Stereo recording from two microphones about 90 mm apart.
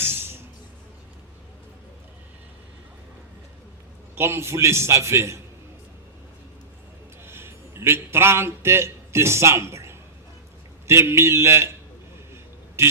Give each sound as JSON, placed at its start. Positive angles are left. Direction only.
{"t": 0.0, "sound": "music", "side_deg": -25}
{"t": 4.1, "sound": "a man's voice", "side_deg": -25}
{"t": 7.3, "sound": "a man's voice", "side_deg": -30}
{"t": 12.3, "sound": "a sound", "side_deg": -30}